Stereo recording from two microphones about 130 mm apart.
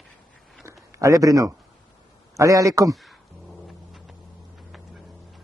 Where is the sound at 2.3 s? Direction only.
25° right (ahead or behind).